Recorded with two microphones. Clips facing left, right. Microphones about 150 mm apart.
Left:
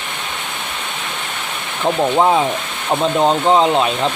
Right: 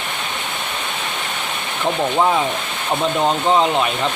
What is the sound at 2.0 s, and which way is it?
Speech, 20° left (ahead or behind).